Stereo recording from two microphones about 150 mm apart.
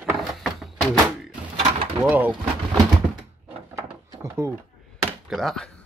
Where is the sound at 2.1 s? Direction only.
10° right (ahead or behind).